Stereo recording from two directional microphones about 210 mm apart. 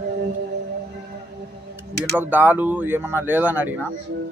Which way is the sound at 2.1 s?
10° right (ahead or behind).